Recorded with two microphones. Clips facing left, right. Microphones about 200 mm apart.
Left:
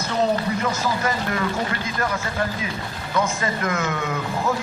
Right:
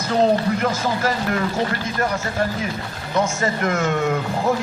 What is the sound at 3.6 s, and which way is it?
Speech, 50° right (ahead or behind).